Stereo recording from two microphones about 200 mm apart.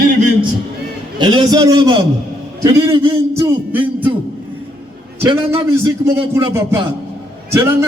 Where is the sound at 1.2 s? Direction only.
20° right (ahead or behind).